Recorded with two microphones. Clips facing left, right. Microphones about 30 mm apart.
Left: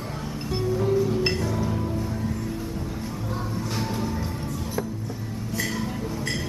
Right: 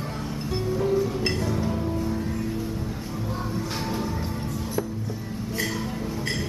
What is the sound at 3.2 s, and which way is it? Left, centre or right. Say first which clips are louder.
Music: right 3 dB; centre.